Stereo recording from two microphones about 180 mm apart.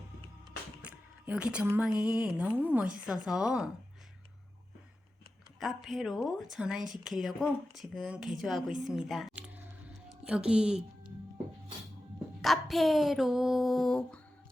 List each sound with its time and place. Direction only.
0.8 s a woman's voice: 10° right (ahead or behind)
5.5 s a woman's voice: centre (ahead or behind)
12.4 s a woman's voice: centre (ahead or behind)